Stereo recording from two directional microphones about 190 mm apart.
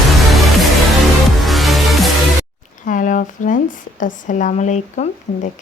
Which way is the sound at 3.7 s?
45° left (ahead or behind).